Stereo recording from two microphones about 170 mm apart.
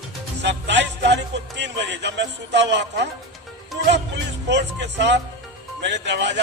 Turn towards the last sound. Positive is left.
turn(degrees=-90)